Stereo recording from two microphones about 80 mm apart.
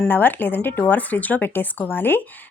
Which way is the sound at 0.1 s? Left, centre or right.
Left.